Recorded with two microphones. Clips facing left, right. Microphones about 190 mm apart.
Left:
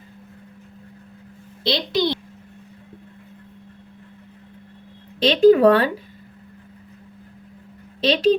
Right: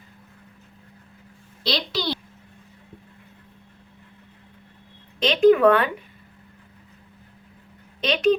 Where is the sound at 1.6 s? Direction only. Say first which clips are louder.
Left 5 dB; 20° left (ahead or behind).